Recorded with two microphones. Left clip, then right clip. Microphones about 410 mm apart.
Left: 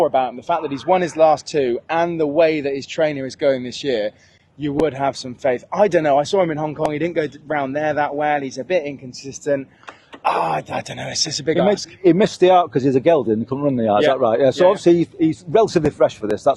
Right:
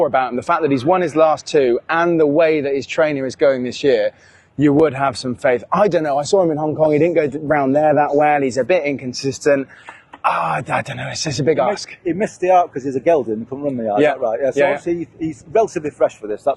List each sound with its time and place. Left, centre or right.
0.0 s speech: right
12.5 s speech: left
12.9 s speech: left
13.2 s speech: left
14.3 s speech: left
14.7 s speech: left
15.8 s speech: left
16.3 s speech: left